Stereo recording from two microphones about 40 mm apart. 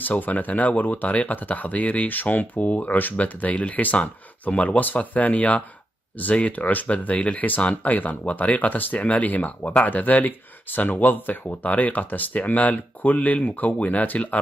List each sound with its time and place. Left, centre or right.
0.0 s speech: left